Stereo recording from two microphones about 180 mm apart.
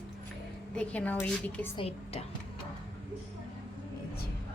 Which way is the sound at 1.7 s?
35° left (ahead or behind).